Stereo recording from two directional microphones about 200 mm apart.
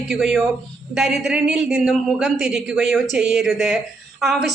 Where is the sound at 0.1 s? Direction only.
Centre (ahead or behind).